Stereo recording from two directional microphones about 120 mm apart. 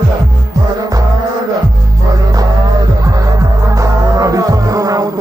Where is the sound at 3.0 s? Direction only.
30° right (ahead or behind).